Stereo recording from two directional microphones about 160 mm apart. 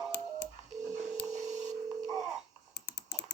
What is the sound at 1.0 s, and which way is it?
Telephone dialing, 45° right (ahead or behind).